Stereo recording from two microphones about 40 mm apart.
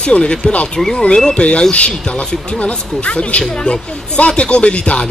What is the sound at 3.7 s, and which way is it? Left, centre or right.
Speech, left.